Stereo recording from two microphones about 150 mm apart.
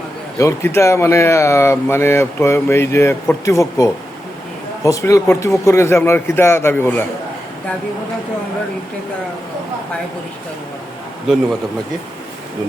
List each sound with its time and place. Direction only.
0.3 s speech: 20° left (ahead or behind)